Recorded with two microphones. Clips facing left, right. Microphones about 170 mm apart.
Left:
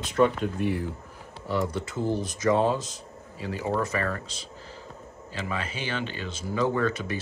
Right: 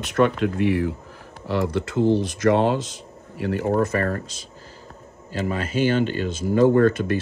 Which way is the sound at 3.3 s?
65° right (ahead or behind).